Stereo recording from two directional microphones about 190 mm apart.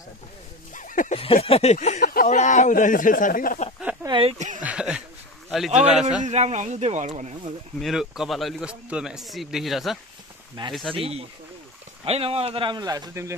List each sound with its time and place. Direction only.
0.7 s a sound: 45° left (ahead or behind)
1.2 s speech: 30° left (ahead or behind)
4.0 s speech: 25° right (ahead or behind)
4.6 s speech: 5° right (ahead or behind)
5.7 s speech: 40° right (ahead or behind)
7.8 s speech: centre (ahead or behind)
11.0 s speech: 30° right (ahead or behind); by 13.3 s 15° right (ahead or behind)